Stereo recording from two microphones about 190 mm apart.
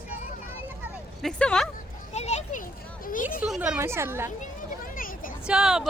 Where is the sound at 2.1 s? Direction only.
35° left (ahead or behind).